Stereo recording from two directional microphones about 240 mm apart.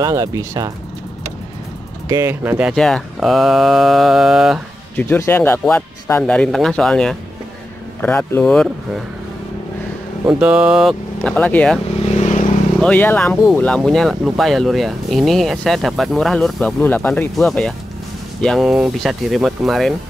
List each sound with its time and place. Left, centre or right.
0.0 s speech: centre
2.0 s speech: centre
10.2 s speech: centre
12.0 s vehicle: left
12.8 s speech: centre